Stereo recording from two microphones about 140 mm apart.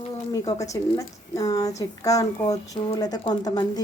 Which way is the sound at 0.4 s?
25° left (ahead or behind).